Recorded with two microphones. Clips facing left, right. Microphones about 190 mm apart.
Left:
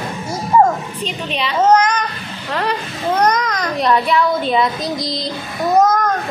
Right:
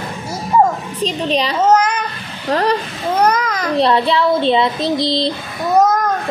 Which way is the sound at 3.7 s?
30° right (ahead or behind).